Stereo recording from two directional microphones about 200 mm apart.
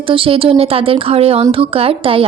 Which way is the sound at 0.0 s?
25° right (ahead or behind).